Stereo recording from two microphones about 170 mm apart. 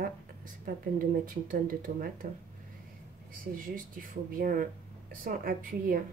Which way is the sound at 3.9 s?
55° right (ahead or behind).